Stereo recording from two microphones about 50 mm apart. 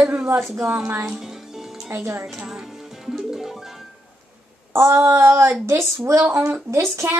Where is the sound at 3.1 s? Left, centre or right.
Centre.